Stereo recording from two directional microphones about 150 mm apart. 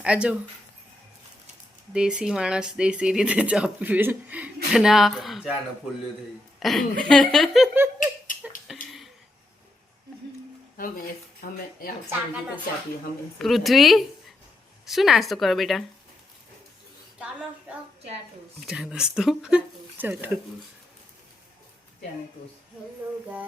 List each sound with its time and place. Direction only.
0.0 s speech: 5° right (ahead or behind)
1.9 s speech: 5° right (ahead or behind)
6.6 s a woman's voice: centre (ahead or behind)
7.9 s a sound: 60° left (ahead or behind)
10.8 s speech: 70° left (ahead or behind)
13.4 s speech: centre (ahead or behind)
18.6 s speech: 5° right (ahead or behind)